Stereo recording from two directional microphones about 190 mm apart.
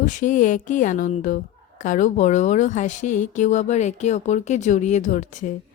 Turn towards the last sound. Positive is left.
turn(degrees=40)  # may be behind; listen again after turning